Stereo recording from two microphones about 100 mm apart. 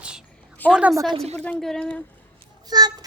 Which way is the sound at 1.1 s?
90° right.